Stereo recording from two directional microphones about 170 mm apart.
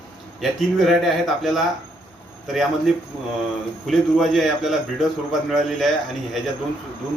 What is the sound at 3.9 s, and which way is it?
Speech, centre (ahead or behind).